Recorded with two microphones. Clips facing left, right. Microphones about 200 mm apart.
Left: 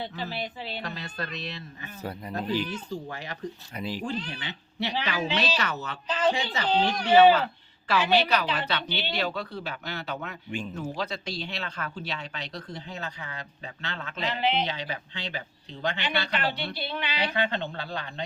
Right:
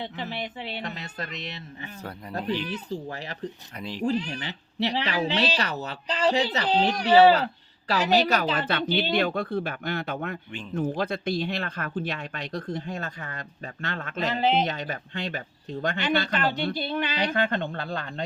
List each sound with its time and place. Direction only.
0.0 s speech: 20° right (ahead or behind)
2.4 s speech: 5° left (ahead or behind)
2.6 s speech: 35° right (ahead or behind)
3.8 s speech: 5° left (ahead or behind)
4.0 s a man's voice: 35° right (ahead or behind)